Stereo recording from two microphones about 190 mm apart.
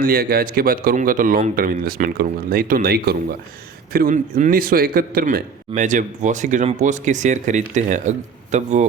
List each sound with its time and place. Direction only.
0.0 s a man's voice: 50° right (ahead or behind)